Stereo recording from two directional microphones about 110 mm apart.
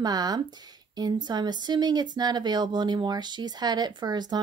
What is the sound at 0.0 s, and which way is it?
Speech, 35° right (ahead or behind).